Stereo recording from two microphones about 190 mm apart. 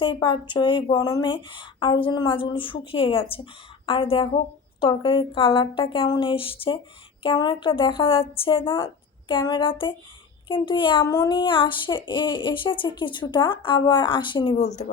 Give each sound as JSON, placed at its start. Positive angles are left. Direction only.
{"t": 0.0, "sound": "speech", "side_deg": 25}